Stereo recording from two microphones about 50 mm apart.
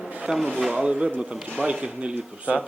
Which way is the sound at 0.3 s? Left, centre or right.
Centre.